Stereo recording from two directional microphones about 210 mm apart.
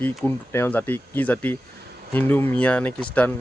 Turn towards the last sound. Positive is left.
turn(degrees=5)  # may be behind; listen again after turning